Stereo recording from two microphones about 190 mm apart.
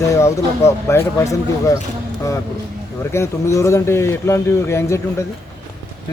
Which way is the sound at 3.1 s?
15° left (ahead or behind).